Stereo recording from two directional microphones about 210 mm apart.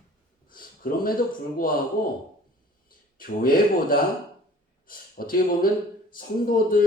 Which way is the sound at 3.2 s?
45° left (ahead or behind).